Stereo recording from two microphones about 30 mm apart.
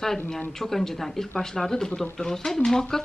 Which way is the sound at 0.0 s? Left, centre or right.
Centre.